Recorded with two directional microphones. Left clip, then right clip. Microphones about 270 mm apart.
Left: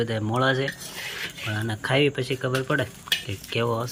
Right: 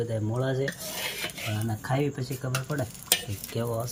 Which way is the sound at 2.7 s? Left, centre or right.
Centre.